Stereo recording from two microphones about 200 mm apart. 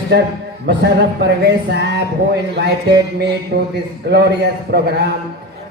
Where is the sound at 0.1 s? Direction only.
60° right (ahead or behind).